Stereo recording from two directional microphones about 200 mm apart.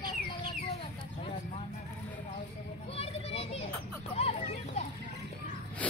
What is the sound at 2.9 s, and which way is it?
Children playing, 30° left (ahead or behind).